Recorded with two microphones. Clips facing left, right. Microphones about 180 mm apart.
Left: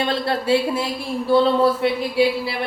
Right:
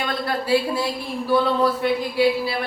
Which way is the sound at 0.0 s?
30° left (ahead or behind).